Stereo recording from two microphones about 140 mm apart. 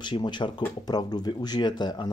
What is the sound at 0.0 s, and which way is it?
Speech, 35° left (ahead or behind).